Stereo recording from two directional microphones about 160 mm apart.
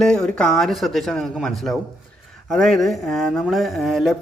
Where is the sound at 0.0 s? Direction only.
5° left (ahead or behind).